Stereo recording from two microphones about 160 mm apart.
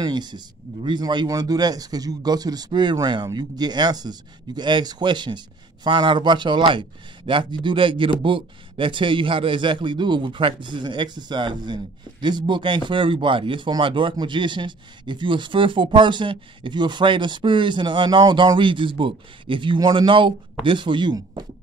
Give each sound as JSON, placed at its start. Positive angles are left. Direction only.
{"t": 0.0, "sound": "a man's voice", "side_deg": -25}